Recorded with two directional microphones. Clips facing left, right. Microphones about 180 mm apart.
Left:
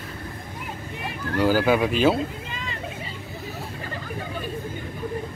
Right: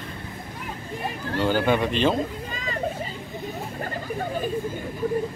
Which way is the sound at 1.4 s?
5° left (ahead or behind).